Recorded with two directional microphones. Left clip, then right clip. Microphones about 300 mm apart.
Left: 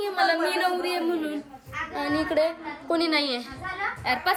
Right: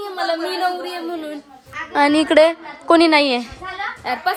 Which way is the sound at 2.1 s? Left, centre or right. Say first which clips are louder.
Right 10 dB; right.